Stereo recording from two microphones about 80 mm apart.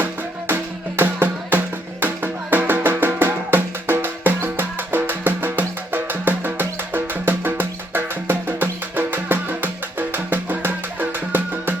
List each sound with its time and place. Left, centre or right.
0.0 s music: right